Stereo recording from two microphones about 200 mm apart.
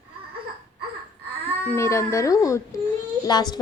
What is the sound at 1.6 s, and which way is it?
A woman's voice, 10° left (ahead or behind).